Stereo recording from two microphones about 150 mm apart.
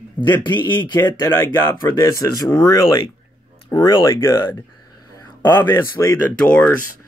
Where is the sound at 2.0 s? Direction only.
20° left (ahead or behind).